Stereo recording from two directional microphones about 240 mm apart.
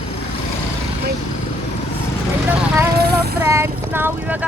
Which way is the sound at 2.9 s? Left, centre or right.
Right.